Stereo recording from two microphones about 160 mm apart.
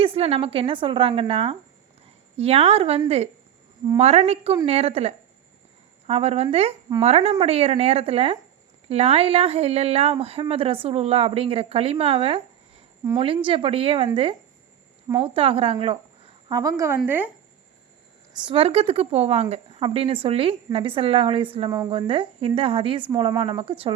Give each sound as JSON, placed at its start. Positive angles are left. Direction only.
{"t": 0.0, "sound": "speech", "side_deg": -35}
{"t": 15.2, "sound": "speech", "side_deg": -35}
{"t": 16.5, "sound": "speech", "side_deg": -20}
{"t": 18.4, "sound": "speech", "side_deg": -35}